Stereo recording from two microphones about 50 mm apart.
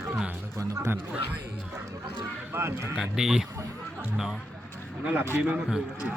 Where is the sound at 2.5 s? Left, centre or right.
Right.